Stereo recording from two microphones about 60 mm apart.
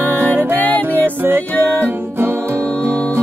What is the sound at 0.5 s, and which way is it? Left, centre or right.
Music, left.